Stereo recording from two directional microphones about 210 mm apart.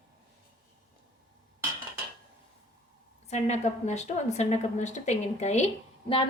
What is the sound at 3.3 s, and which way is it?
A woman's voice, 35° left (ahead or behind).